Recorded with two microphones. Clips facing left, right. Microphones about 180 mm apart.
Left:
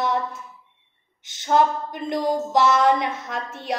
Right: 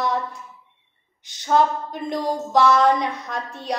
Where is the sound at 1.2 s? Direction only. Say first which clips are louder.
Even; centre (ahead or behind).